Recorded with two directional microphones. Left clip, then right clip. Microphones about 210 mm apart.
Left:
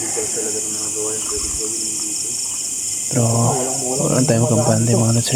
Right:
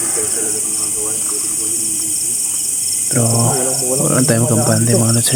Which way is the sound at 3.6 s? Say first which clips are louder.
Right 3 dB; 10° right (ahead or behind).